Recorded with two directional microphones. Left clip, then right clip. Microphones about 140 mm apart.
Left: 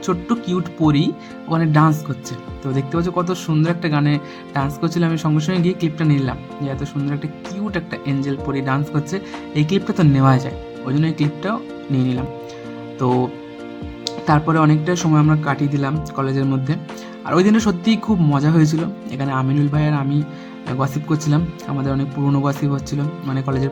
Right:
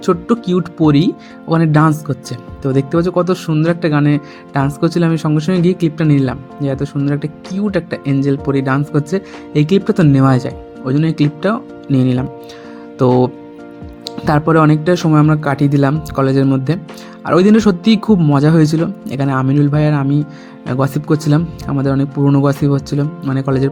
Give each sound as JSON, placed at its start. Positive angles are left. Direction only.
{"t": 0.0, "sound": "speech", "side_deg": -25}
{"t": 14.3, "sound": "speech", "side_deg": -40}